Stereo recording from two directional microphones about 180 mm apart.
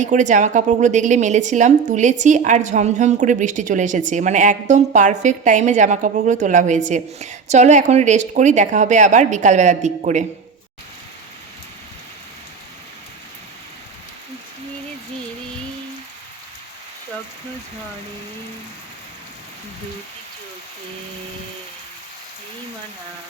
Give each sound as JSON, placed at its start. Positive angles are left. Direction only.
{"t": 0.0, "sound": "a woman's voice", "side_deg": -45}